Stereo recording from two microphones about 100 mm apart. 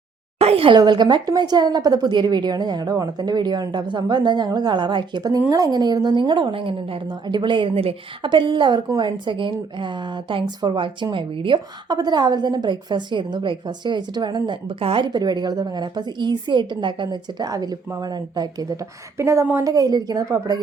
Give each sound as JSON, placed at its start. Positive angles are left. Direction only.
{"t": 0.3, "sound": "a sound", "side_deg": -80}
{"t": 0.8, "sound": "speech", "side_deg": -45}
{"t": 5.5, "sound": "a woman's voice", "side_deg": -35}